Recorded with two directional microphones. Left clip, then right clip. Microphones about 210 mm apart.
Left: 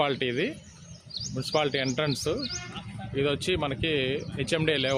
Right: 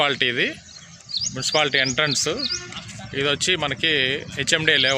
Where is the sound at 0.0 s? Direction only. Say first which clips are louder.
Right 7 dB; centre (ahead or behind).